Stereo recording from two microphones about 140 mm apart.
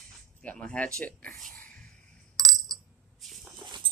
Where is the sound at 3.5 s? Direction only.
30° right (ahead or behind).